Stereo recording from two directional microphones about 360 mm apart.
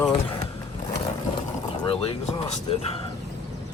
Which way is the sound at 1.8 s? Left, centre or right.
Centre.